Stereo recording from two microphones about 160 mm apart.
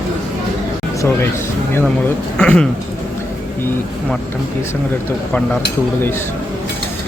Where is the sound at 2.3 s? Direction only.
5° left (ahead or behind).